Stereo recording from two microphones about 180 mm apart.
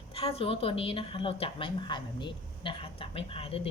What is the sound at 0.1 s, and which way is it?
A woman's voice, 30° left (ahead or behind).